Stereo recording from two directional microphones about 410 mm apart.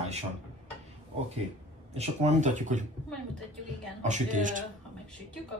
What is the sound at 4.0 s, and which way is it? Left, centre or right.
Speech, centre.